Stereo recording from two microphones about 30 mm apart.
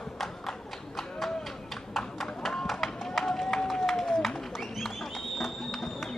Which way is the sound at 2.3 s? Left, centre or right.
Centre.